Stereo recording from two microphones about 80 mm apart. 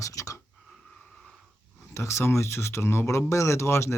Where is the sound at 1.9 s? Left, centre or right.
Left.